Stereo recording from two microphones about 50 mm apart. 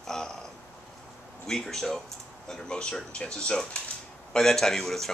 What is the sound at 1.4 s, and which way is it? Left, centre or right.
Speech, centre.